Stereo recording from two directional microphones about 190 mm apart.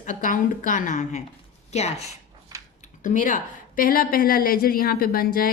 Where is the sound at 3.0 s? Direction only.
40° left (ahead or behind).